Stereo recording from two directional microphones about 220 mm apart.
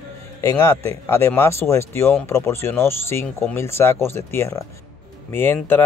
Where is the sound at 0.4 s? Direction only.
15° left (ahead or behind).